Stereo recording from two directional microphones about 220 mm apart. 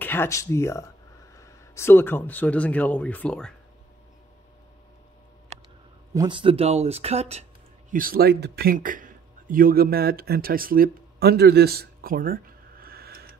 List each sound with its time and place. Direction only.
0.0 s speech: 10° left (ahead or behind)
6.1 s speech: 20° right (ahead or behind)
7.9 s speech: 40° right (ahead or behind)